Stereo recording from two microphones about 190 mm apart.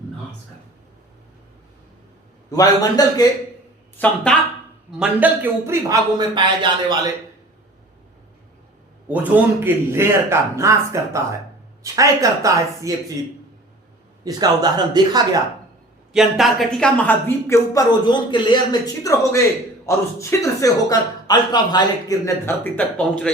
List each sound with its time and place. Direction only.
2.5 s a man's voice: 20° left (ahead or behind)
3.9 s a man's voice: 5° left (ahead or behind)
4.9 s a man's voice: 5° right (ahead or behind); by 7.1 s 25° right (ahead or behind)
9.0 s a man's voice: 10° right (ahead or behind)
14.3 s speech: 20° right (ahead or behind)
16.1 s a man's voice: centre (ahead or behind)